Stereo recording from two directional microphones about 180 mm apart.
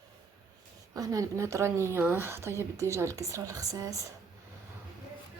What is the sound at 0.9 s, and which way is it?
Speech, 20° right (ahead or behind).